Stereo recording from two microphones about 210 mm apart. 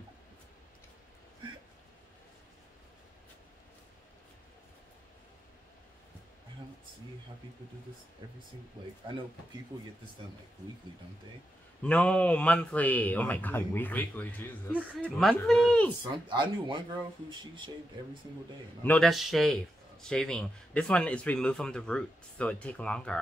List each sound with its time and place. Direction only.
8.2 s speech: 20° right (ahead or behind)
11.8 s a man's voice: 5° left (ahead or behind)
16.3 s speech: 20° right (ahead or behind)
18.8 s a man's voice: 5° left (ahead or behind)